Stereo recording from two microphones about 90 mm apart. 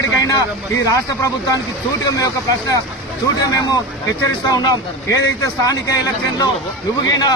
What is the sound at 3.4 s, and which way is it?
Speech, 40° left (ahead or behind).